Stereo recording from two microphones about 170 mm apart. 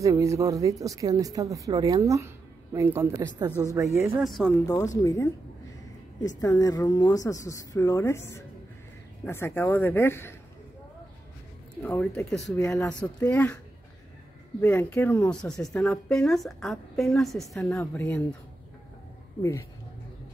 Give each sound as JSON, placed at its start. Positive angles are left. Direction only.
{"t": 0.0, "sound": "speech", "side_deg": -20}
{"t": 4.0, "sound": "speech", "side_deg": 0}
{"t": 4.6, "sound": "speech", "side_deg": 20}
{"t": 6.4, "sound": "speech", "side_deg": 20}
{"t": 11.8, "sound": "speech", "side_deg": 10}
{"t": 12.5, "sound": "speech", "side_deg": 15}
{"t": 14.6, "sound": "speech", "side_deg": 10}
{"t": 17.6, "sound": "speech", "side_deg": 10}